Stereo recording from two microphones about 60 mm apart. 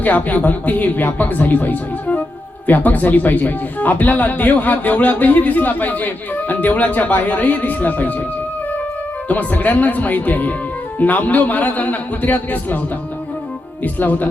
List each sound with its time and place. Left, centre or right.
0.0 s speech: left
9.3 s speech: left
13.8 s speech: left